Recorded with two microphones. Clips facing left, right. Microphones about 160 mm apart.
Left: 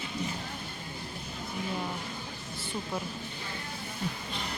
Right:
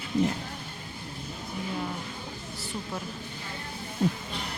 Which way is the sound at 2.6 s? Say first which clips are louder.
Left 1 dB; centre (ahead or behind).